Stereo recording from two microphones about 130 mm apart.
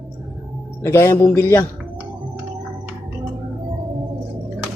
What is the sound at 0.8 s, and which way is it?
Speech, 20° left (ahead or behind).